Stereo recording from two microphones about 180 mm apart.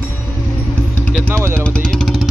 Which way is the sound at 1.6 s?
5° left (ahead or behind).